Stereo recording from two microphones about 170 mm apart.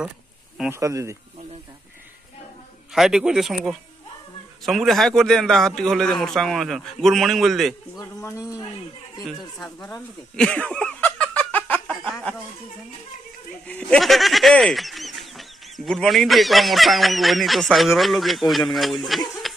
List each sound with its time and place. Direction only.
0.7 s speech: 20° right (ahead or behind)
2.9 s speech: 5° right (ahead or behind)
8.0 s speech: 20° left (ahead or behind)
9.2 s speech: 5° left (ahead or behind)
9.8 s a sound: 5° left (ahead or behind)
13.7 s speech: 5° left (ahead or behind)